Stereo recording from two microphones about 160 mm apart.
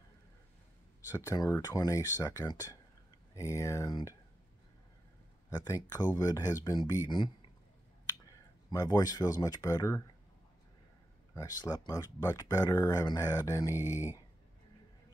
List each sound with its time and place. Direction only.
1.1 s speech: 25° left (ahead or behind)
5.5 s speech: 25° left (ahead or behind)
8.3 s speech: 25° left (ahead or behind)
11.3 s speech: 25° left (ahead or behind)
13.7 s speech: 15° right (ahead or behind)